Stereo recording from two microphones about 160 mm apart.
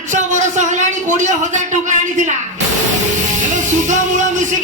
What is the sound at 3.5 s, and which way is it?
Music, 50° right (ahead or behind).